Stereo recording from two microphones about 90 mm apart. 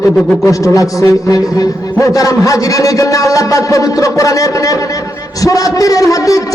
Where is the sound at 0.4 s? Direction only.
35° left (ahead or behind).